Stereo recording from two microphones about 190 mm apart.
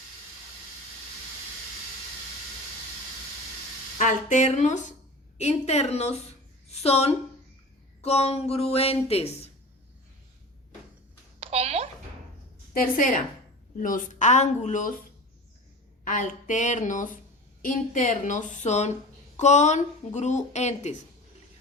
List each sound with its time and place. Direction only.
3.9 s speech: 40° left (ahead or behind)
11.3 s a sound: 35° right (ahead or behind)
12.7 s a woman's voice: 45° left (ahead or behind)
16.0 s speech: 40° left (ahead or behind)